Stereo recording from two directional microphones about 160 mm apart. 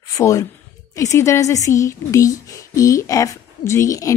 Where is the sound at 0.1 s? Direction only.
20° left (ahead or behind).